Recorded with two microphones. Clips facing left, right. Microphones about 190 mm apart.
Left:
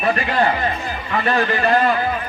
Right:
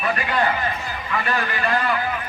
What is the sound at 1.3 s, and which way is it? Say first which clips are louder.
Speech: left 7 dB; 30° left (ahead or behind).